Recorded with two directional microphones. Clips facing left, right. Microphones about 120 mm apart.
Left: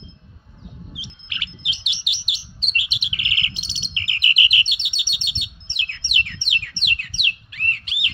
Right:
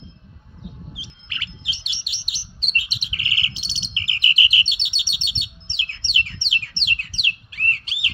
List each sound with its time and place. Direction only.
0.9 s bird: 35° right (ahead or behind)